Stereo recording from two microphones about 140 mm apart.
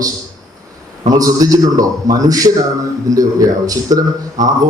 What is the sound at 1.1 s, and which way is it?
A man's voice, 25° right (ahead or behind).